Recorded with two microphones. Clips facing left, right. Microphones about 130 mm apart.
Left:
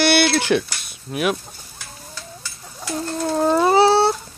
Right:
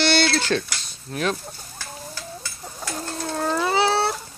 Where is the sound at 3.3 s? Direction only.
20° left (ahead or behind).